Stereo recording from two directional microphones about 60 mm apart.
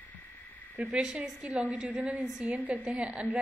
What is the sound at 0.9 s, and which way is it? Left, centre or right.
A woman's voice, centre.